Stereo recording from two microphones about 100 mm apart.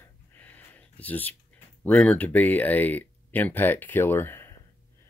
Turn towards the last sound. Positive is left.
turn(degrees=25)  # may be behind; listen again after turning